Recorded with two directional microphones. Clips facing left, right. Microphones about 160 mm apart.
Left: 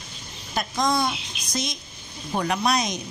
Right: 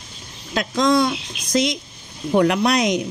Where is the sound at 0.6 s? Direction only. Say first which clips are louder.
Right 6 dB; 90° right.